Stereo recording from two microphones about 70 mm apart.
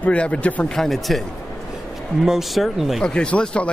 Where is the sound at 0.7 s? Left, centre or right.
Centre.